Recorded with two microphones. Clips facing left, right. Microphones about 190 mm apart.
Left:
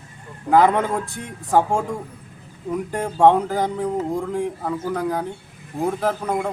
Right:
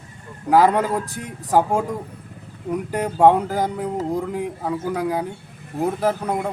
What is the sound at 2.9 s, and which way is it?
A man's voice, 5° right (ahead or behind).